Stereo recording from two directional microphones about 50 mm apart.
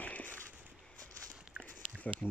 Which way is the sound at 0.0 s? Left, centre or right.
Left.